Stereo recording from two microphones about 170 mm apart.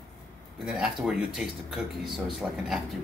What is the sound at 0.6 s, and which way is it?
Speech, 5° right (ahead or behind).